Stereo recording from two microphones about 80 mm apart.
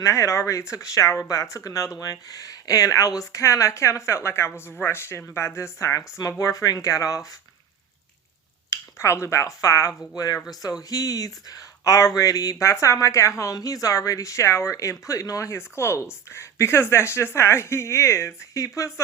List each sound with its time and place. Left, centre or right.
0.0 s speech: left
8.7 s speech: left